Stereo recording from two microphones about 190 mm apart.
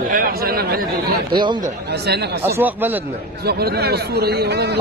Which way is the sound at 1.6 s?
60° right (ahead or behind).